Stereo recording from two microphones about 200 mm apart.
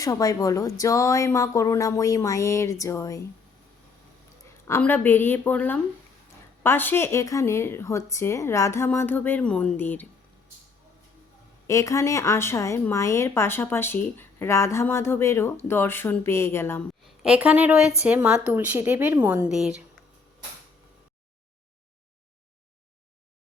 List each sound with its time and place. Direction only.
0.0 s speech: 15° left (ahead or behind)
4.6 s speech: 10° left (ahead or behind)
11.7 s speech: 15° left (ahead or behind)
17.2 s a woman's voice: 5° right (ahead or behind)